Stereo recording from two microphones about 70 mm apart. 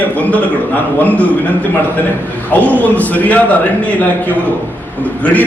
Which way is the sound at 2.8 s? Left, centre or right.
Left.